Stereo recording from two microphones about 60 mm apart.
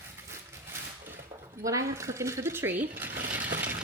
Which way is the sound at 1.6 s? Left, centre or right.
Right.